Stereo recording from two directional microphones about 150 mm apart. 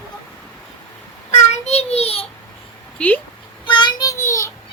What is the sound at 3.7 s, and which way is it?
Child singing, 30° left (ahead or behind).